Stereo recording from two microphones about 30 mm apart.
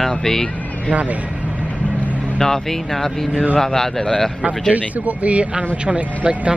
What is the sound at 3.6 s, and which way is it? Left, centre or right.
Speech, centre.